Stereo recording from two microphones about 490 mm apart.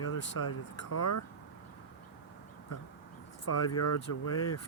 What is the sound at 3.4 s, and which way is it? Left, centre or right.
Speech, left.